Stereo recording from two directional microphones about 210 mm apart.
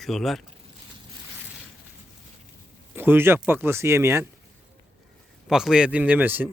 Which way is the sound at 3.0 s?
10° right (ahead or behind).